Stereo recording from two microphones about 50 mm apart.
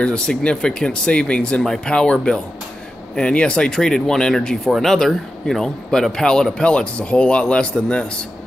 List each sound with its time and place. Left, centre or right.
0.0 s a man's voice: centre